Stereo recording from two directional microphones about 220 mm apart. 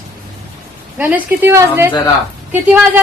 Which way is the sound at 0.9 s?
10° right (ahead or behind).